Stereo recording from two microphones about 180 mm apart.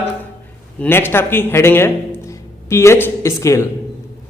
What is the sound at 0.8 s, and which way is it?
A man's voice, 10° left (ahead or behind).